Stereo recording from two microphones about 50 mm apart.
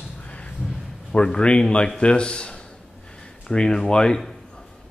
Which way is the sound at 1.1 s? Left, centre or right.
Centre.